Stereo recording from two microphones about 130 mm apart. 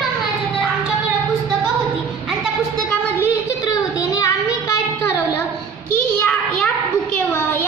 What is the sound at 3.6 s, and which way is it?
Child singing, 25° left (ahead or behind).